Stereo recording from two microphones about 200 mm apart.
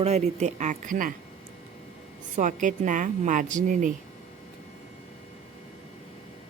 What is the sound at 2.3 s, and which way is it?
Speech, 40° right (ahead or behind).